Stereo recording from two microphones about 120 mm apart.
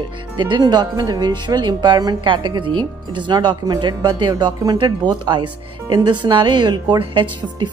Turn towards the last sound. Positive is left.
turn(degrees=-40)  # may be behind; listen again after turning